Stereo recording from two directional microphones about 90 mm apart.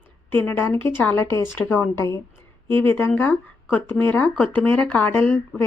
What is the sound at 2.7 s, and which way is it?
A woman's voice, 20° left (ahead or behind).